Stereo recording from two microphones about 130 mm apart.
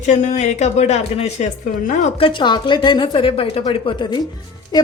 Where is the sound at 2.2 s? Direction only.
40° left (ahead or behind).